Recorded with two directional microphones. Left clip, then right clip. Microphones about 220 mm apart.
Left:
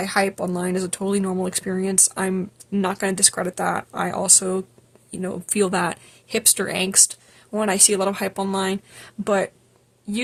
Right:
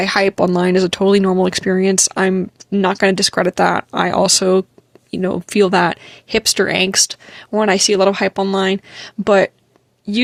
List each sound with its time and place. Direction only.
0.0 s speech: 40° right (ahead or behind)